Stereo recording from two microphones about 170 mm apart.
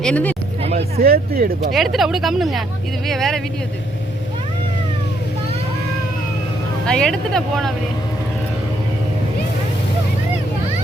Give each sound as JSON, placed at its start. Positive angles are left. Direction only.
{"t": 0.0, "sound": "speech", "side_deg": 10}
{"t": 0.6, "sound": "speech", "side_deg": -40}
{"t": 1.0, "sound": "speech", "side_deg": -65}
{"t": 1.7, "sound": "speech", "side_deg": 0}
{"t": 6.8, "sound": "speech", "side_deg": 5}